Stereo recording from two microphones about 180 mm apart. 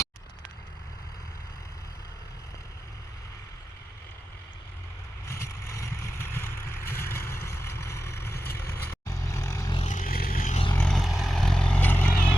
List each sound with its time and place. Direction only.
5.2 s vehicle: 15° left (ahead or behind)
9.7 s vehicle: 40° left (ahead or behind)
10.8 s vehicle: centre (ahead or behind)